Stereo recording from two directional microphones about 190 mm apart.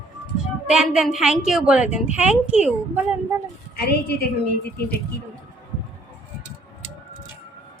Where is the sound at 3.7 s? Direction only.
55° left (ahead or behind).